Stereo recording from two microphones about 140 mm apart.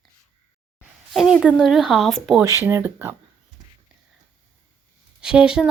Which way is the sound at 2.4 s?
20° right (ahead or behind).